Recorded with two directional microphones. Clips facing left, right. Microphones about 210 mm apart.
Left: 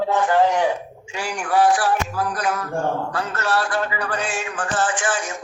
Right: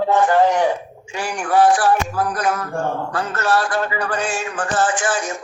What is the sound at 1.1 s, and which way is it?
Music, 50° right (ahead or behind).